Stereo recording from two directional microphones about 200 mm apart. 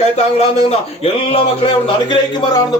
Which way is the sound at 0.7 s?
30° left (ahead or behind).